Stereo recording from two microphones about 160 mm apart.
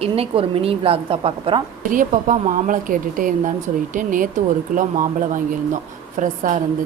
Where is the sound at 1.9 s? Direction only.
55° right (ahead or behind).